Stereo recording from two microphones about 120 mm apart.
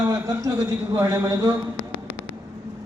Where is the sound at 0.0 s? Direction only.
30° right (ahead or behind).